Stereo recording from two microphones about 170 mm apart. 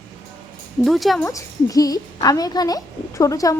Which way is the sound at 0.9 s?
Centre (ahead or behind).